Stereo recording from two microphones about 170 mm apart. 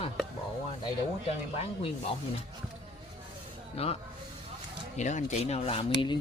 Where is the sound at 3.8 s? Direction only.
35° left (ahead or behind).